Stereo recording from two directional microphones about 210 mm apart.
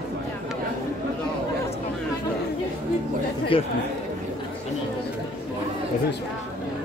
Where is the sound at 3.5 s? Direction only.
25° left (ahead or behind).